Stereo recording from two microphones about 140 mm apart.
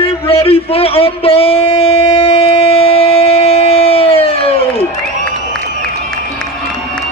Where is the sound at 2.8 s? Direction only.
45° left (ahead or behind).